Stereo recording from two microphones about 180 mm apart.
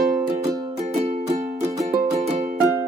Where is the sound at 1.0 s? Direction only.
35° right (ahead or behind).